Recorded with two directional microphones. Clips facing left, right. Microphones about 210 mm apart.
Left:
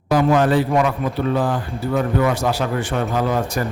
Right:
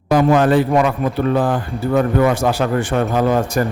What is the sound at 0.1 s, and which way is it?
A man's voice, 55° right (ahead or behind).